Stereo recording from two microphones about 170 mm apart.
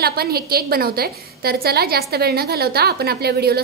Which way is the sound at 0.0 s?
65° right (ahead or behind).